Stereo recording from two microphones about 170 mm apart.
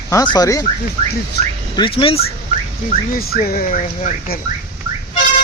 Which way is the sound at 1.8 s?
30° left (ahead or behind).